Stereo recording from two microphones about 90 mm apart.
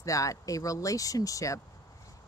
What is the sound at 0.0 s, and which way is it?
Speech, 40° left (ahead or behind).